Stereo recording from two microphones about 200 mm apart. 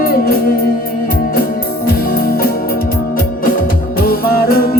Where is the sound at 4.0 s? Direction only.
50° left (ahead or behind).